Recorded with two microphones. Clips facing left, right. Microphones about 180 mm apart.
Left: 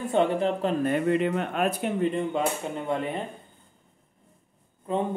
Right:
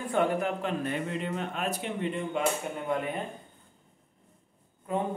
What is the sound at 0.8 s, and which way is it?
Speech, 55° left (ahead or behind).